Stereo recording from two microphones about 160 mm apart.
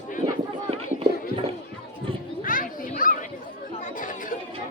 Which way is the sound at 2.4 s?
60° left (ahead or behind).